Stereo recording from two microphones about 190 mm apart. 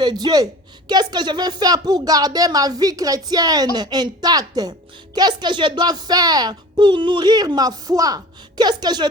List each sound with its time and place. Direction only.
0.0 s speech: 20° right (ahead or behind)